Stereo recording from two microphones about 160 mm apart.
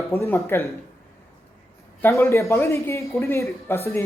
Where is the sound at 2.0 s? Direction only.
15° left (ahead or behind).